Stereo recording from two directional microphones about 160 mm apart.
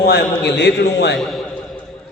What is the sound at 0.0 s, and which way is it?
A man's voice, 90° left.